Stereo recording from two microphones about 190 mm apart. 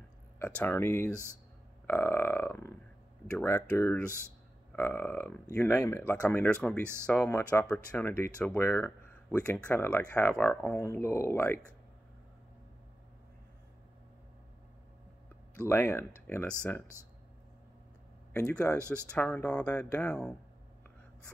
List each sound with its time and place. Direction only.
0.6 s speech: 10° left (ahead or behind)
6.8 s speech: 15° right (ahead or behind)
7.1 s speech: 10° left (ahead or behind)
15.7 s speech: 10° left (ahead or behind)
18.3 s speech: 5° left (ahead or behind)